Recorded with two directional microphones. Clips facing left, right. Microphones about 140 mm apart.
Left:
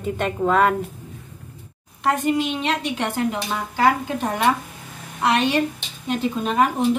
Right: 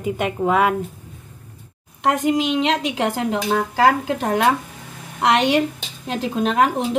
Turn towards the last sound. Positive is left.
turn(degrees=-90)